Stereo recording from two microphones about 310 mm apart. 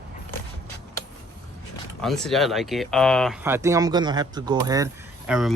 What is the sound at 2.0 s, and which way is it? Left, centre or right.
Speech, centre.